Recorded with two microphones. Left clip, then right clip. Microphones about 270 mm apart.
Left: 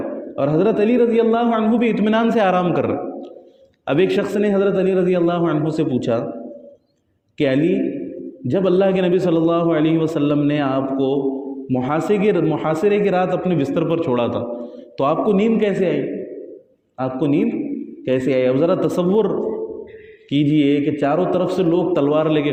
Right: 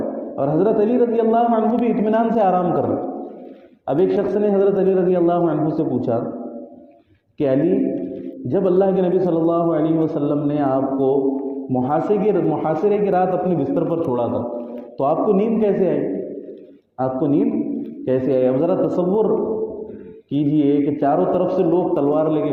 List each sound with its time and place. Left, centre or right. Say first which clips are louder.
0.3 s a man's voice: left 1 dB; left
3.8 s a man's voice: even; left
7.3 s a man's voice: even; left
17.0 s a man's voice: right 1 dB; left
20.3 s a man's voice: left 1 dB; left